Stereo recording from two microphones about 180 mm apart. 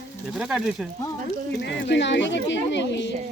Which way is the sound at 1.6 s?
75° left (ahead or behind).